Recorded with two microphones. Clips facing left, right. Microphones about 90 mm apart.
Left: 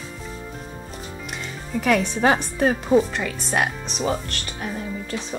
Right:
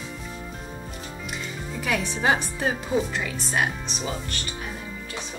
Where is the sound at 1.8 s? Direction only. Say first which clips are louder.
Left 5 dB; 55° left (ahead or behind).